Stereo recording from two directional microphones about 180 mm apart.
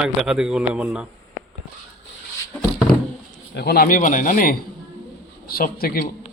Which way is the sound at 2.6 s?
Centre (ahead or behind).